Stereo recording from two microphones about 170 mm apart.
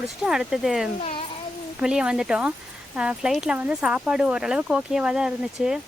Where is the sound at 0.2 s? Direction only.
5° right (ahead or behind).